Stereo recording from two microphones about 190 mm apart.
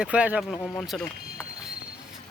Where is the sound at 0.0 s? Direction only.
5° right (ahead or behind).